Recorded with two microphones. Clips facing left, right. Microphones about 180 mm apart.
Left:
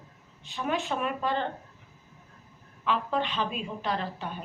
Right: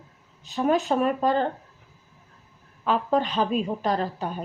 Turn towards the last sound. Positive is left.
turn(degrees=-40)  # may be behind; listen again after turning